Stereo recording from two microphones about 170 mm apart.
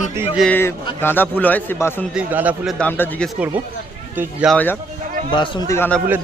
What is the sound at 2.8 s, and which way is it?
Speech, 10° left (ahead or behind).